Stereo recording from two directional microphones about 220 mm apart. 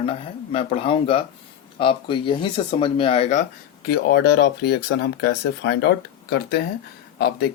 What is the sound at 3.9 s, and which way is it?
Speech, 50° left (ahead or behind).